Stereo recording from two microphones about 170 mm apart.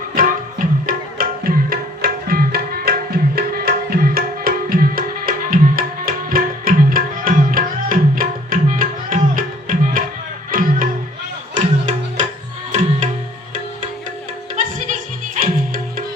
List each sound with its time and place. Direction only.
0.2 s tabla: 55° right (ahead or behind)
10.5 s music: 55° right (ahead or behind)
14.5 s music: 50° right (ahead or behind)